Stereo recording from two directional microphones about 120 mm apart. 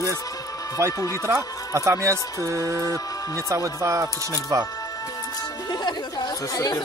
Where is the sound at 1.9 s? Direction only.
25° right (ahead or behind).